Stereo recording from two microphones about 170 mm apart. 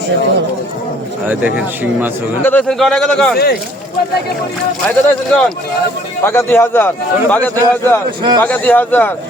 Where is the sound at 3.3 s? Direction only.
65° left (ahead or behind).